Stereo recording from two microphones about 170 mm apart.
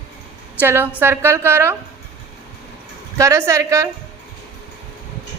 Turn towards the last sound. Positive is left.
turn(degrees=-20)  # may be behind; listen again after turning